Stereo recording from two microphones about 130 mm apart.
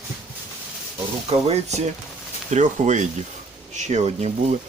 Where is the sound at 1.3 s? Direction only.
55° right (ahead or behind).